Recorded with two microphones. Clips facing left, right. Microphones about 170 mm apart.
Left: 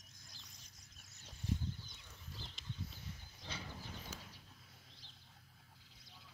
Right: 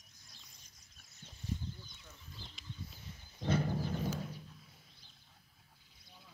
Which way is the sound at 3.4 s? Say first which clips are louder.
Right 16 dB; 55° right (ahead or behind).